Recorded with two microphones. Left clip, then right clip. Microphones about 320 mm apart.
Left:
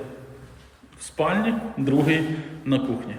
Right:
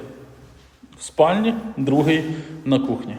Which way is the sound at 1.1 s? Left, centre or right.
Centre.